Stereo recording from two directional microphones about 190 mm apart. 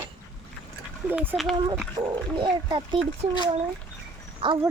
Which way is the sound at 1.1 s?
10° right (ahead or behind).